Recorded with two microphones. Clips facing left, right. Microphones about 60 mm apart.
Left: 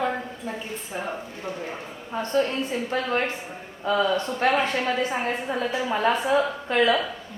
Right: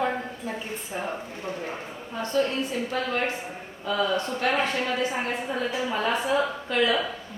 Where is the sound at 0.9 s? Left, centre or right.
Centre.